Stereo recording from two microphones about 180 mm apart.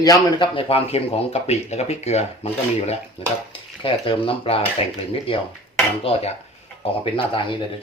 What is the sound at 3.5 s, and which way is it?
Speech, 30° left (ahead or behind).